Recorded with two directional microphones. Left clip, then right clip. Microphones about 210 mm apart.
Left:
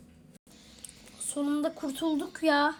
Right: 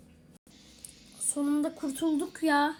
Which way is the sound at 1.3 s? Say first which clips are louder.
Even; 5° left (ahead or behind).